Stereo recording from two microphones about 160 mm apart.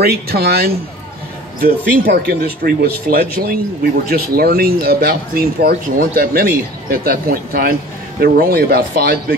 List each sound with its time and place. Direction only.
0.0 s speech: 80° right